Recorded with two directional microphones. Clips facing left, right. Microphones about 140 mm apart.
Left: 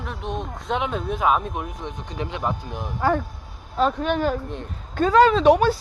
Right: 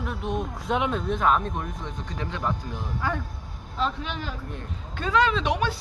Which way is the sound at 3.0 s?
40° left (ahead or behind).